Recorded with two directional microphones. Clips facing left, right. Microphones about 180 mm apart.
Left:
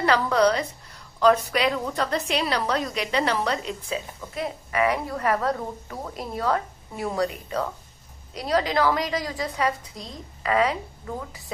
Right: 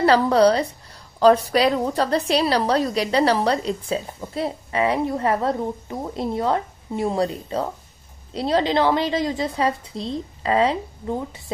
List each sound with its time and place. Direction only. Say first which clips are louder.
0.0 s a woman's voice: right 5 dB; 30° right (ahead or behind)